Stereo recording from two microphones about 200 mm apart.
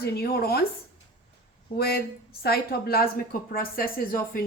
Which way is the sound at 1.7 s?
50° left (ahead or behind).